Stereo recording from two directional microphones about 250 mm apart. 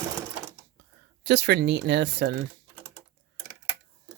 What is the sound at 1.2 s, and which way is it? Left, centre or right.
Speech, right.